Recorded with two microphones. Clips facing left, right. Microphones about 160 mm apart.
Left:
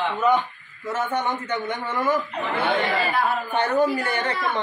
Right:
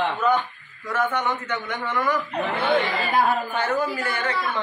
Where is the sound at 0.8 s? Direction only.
25° left (ahead or behind).